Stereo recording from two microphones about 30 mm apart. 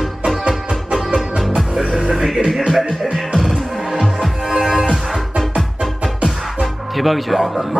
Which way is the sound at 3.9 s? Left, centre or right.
Centre.